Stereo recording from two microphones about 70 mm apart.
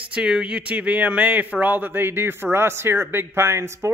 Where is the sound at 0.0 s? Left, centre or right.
Centre.